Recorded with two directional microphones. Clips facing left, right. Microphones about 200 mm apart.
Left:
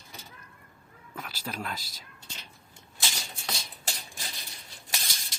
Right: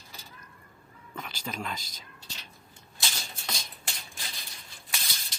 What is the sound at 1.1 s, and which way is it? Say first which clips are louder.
Speech: even; 5° left (ahead or behind).